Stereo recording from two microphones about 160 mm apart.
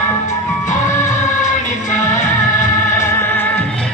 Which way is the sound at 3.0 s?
15° left (ahead or behind).